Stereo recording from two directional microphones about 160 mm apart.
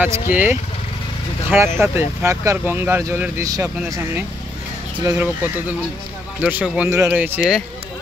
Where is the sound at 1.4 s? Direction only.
15° right (ahead or behind).